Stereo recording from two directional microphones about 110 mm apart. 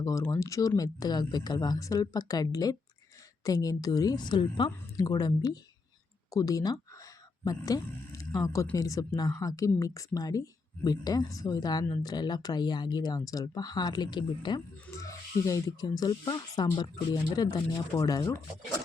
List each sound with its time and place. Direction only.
0.0 s speech: 30° left (ahead or behind)
5.0 s speech: 35° left (ahead or behind)
14.8 s speech: 30° left (ahead or behind)